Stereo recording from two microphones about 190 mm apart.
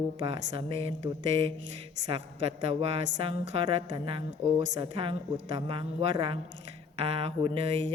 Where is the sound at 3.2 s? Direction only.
30° right (ahead or behind).